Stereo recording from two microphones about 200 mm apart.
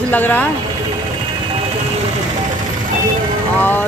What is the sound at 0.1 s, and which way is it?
Speech, 10° left (ahead or behind).